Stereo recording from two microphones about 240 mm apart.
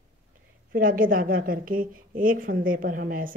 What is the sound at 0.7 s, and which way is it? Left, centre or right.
Speech, right.